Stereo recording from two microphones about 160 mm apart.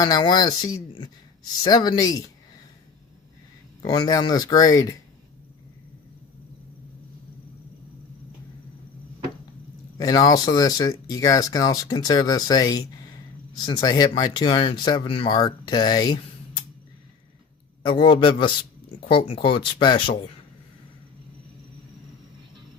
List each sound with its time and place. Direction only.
0.0 s speech: 25° left (ahead or behind)
3.8 s speech: 25° left (ahead or behind)
10.0 s speech: 25° left (ahead or behind)
17.8 s speech: 30° left (ahead or behind)